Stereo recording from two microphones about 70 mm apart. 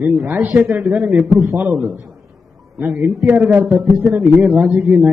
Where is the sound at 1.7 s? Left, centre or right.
Centre.